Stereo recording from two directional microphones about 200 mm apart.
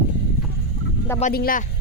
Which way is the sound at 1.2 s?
50° left (ahead or behind).